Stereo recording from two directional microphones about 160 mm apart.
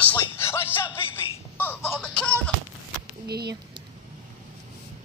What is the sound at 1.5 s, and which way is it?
Music, 10° left (ahead or behind).